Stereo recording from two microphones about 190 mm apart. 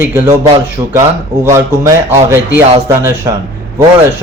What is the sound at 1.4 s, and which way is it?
Speech, 15° right (ahead or behind).